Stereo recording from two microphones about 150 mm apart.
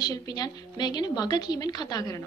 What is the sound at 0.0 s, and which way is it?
Speech, 25° left (ahead or behind).